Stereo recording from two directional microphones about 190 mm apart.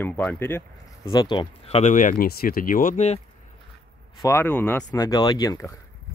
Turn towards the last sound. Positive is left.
turn(degrees=15)  # may be behind; listen again after turning